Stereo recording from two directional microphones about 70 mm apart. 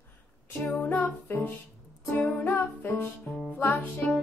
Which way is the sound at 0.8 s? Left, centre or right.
Centre.